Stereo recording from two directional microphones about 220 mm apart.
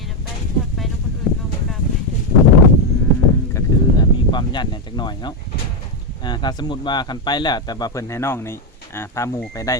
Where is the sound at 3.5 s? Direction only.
20° left (ahead or behind).